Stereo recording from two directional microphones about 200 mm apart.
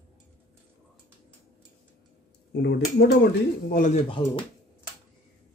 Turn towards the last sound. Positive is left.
turn(degrees=25)  # may be behind; listen again after turning